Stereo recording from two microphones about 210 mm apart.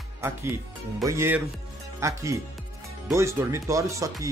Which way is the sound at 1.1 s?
10° right (ahead or behind).